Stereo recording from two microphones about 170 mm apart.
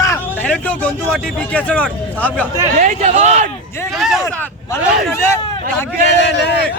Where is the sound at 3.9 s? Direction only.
Centre (ahead or behind).